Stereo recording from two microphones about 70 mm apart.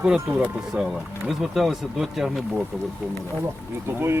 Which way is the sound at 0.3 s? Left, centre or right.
Centre.